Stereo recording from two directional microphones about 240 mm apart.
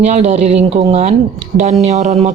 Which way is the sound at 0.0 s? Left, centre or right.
Right.